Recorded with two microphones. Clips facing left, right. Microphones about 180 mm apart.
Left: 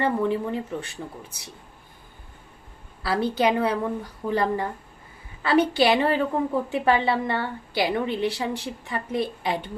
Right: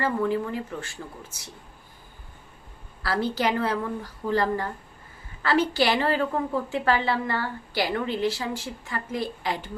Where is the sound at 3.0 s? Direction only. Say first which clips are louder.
Left 3 dB; 20° left (ahead or behind).